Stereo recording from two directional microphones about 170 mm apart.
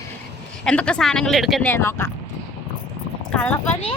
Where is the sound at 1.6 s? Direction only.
15° left (ahead or behind).